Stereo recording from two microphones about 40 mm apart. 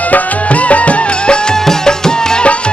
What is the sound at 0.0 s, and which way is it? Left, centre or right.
Music, left.